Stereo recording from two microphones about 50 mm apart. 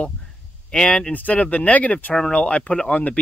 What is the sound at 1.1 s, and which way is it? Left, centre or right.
Speech, left.